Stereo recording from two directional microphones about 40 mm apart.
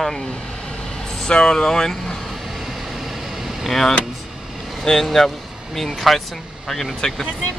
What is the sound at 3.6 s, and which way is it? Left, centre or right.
Speech, centre.